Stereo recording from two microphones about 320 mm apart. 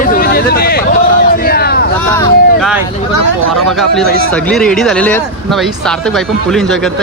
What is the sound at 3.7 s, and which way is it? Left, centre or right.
Speech, centre.